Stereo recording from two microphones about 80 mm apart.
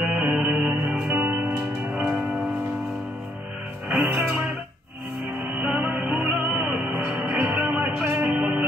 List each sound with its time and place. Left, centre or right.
0.0 s music: centre
0.3 s music: centre
3.9 s music: centre